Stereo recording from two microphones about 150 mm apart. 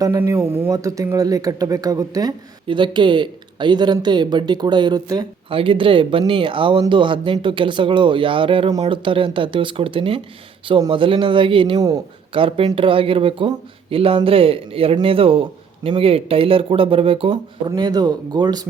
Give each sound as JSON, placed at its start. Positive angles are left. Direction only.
{"t": 0.0, "sound": "speech", "side_deg": -20}
{"t": 5.5, "sound": "speech", "side_deg": -35}
{"t": 17.7, "sound": "speech", "side_deg": -25}